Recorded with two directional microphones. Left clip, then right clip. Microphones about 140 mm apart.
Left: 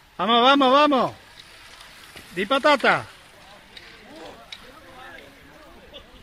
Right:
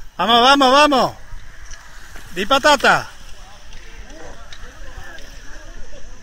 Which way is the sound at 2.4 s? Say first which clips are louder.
Right 5 dB; 20° right (ahead or behind).